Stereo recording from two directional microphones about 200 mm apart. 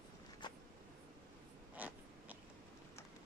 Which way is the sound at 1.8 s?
10° right (ahead or behind).